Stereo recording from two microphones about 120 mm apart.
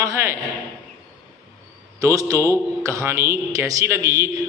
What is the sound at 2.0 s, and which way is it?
A man's voice, 25° right (ahead or behind).